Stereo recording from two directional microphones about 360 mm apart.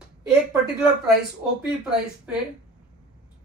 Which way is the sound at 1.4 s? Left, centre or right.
Centre.